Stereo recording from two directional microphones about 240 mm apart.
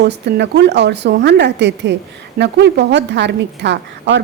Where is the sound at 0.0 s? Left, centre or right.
Right.